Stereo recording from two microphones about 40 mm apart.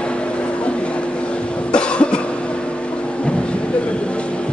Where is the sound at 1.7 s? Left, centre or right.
Left.